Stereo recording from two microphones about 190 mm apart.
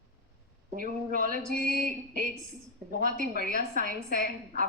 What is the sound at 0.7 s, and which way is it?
Speech, 45° right (ahead or behind).